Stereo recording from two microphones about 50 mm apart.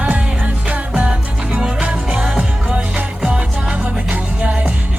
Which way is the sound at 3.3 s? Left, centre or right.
Right.